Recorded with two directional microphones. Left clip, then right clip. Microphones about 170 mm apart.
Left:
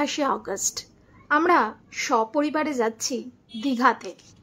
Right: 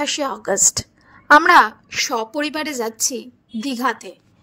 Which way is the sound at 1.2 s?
50° right (ahead or behind).